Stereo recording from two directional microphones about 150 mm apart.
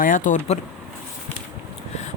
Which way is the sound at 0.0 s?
60° left (ahead or behind).